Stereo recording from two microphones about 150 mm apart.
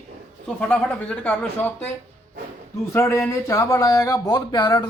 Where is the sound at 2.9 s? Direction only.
20° left (ahead or behind).